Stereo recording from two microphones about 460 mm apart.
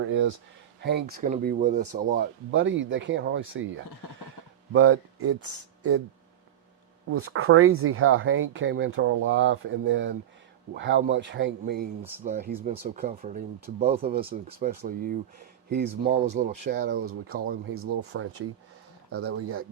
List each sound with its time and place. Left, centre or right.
0.0 s speech: right
4.7 s speech: right
7.1 s speech: right